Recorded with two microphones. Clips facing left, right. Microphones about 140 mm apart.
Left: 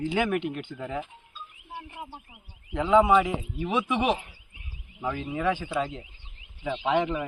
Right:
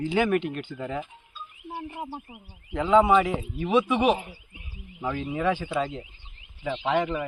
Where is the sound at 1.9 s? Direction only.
40° right (ahead or behind).